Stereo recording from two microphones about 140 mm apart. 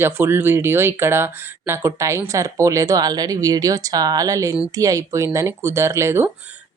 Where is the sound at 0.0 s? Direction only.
15° right (ahead or behind).